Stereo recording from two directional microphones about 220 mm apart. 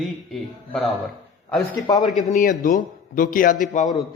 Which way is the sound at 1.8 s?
15° left (ahead or behind).